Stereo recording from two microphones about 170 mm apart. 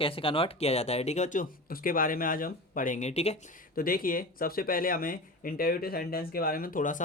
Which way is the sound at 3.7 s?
55° left (ahead or behind).